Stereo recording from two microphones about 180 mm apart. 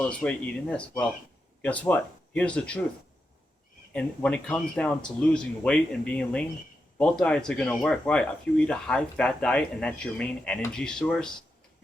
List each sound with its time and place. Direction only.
0.0 s speech: 5° left (ahead or behind)
3.9 s speech: 5° left (ahead or behind)